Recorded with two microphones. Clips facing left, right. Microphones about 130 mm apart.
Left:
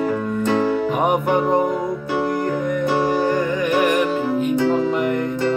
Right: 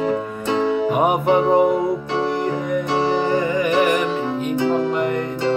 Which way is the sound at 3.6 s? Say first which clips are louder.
Right 1 dB; centre (ahead or behind).